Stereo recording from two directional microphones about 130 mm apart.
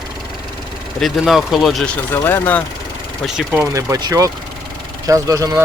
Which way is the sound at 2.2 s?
15° left (ahead or behind).